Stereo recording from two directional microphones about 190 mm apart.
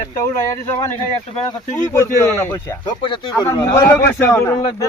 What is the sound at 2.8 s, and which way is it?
A man's voice, 25° left (ahead or behind).